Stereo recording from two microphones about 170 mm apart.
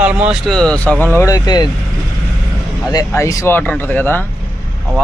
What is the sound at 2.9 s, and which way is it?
Speech, 20° left (ahead or behind).